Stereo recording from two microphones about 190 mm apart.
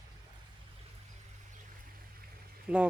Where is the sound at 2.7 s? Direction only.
5° right (ahead or behind).